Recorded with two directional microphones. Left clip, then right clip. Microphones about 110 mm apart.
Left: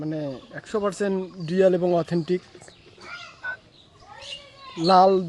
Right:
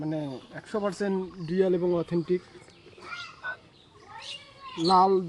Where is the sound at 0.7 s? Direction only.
90° left.